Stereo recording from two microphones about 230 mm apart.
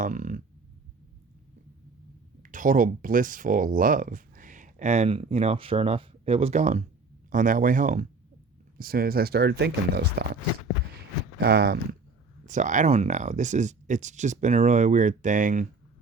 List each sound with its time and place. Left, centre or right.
0.0 s speech: right
2.4 s speech: right
11.3 s speech: right
12.5 s speech: right